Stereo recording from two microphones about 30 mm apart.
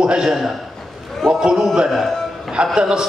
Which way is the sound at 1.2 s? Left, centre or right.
Centre.